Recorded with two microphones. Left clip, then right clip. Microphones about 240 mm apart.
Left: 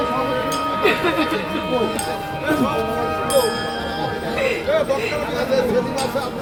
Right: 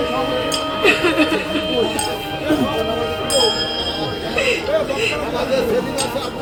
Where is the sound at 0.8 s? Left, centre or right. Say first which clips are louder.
Right 5 dB; right.